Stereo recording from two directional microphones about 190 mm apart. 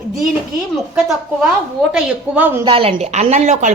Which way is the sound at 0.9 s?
5° right (ahead or behind).